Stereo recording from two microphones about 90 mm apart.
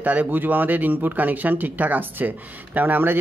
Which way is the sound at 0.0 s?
15° right (ahead or behind).